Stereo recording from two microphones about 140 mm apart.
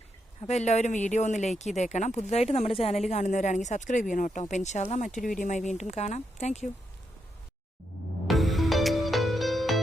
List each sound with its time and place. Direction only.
0.4 s speech: 55° left (ahead or behind)
3.1 s speech: 60° left (ahead or behind)
8.3 s music: centre (ahead or behind)